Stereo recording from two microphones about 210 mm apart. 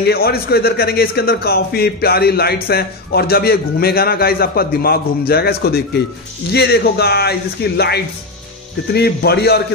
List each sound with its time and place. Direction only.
0.0 s a man's voice: 50° left (ahead or behind)